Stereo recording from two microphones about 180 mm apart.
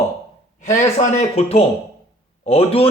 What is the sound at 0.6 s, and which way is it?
A man's voice, 40° left (ahead or behind).